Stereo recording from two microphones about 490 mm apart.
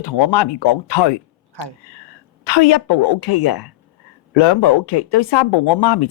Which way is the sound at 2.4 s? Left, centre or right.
Left.